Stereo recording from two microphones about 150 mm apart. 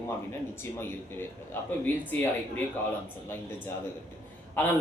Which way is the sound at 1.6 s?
15° left (ahead or behind).